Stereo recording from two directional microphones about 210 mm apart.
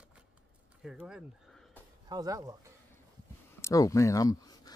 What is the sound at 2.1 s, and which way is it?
Speech, 15° right (ahead or behind).